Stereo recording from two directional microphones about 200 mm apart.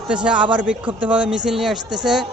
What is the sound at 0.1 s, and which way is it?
A man's voice, 5° right (ahead or behind).